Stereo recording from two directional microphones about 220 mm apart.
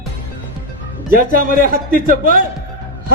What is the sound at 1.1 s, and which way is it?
A man's voice, 40° right (ahead or behind).